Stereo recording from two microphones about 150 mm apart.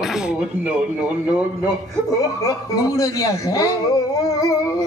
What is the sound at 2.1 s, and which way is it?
Speech, 20° left (ahead or behind).